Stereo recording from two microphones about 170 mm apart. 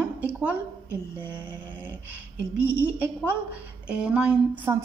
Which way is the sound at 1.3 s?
10° right (ahead or behind).